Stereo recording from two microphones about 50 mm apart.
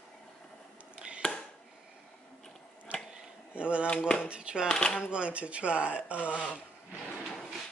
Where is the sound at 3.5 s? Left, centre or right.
Right.